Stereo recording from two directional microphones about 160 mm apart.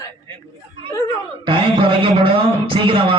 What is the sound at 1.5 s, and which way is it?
A man's voice, 35° right (ahead or behind).